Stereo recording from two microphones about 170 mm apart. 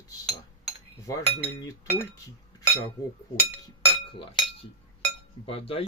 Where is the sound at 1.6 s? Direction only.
20° left (ahead or behind).